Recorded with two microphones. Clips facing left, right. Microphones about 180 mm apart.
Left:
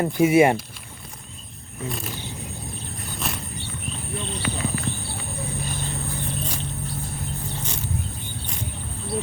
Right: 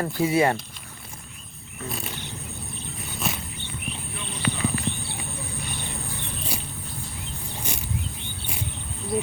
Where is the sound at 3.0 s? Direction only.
Centre (ahead or behind).